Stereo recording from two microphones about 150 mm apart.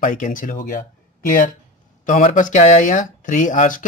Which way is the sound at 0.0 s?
60° left (ahead or behind).